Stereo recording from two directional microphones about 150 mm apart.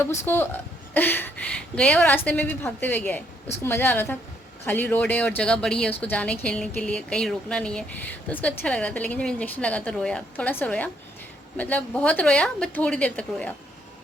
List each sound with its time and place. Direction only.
0.0 s speech: 15° left (ahead or behind)